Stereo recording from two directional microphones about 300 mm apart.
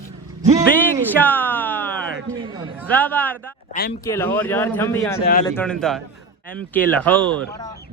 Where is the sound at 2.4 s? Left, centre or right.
Centre.